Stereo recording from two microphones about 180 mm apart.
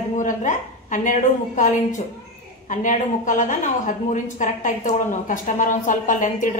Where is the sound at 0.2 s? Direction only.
45° left (ahead or behind).